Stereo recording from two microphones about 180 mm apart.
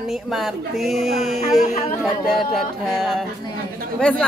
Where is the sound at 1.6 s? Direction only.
40° left (ahead or behind).